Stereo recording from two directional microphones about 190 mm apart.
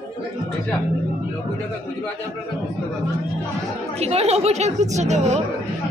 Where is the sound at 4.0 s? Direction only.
35° right (ahead or behind).